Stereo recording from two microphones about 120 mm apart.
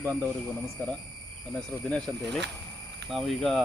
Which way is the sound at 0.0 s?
15° left (ahead or behind).